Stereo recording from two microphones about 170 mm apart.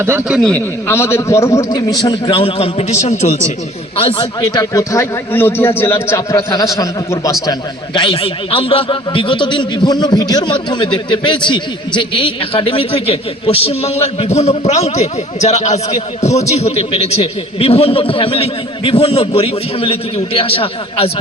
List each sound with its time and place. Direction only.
0.0 s a man's voice: 15° right (ahead or behind)
0.3 s a man's voice: 5° left (ahead or behind)
7.9 s a man's voice: 30° left (ahead or behind)